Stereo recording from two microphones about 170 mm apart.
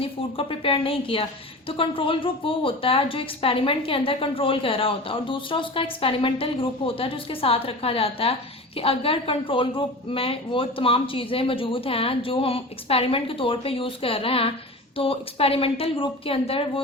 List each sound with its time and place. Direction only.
0.0 s a woman's voice: 35° left (ahead or behind)